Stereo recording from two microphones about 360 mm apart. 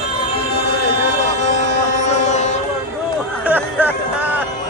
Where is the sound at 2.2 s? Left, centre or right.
Centre.